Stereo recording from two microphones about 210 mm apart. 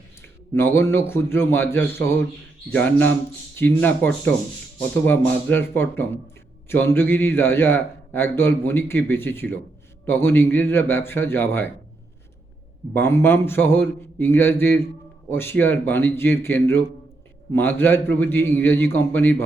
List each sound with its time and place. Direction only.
0.2 s a man's voice: 10° left (ahead or behind)
12.9 s a man's voice: 10° left (ahead or behind)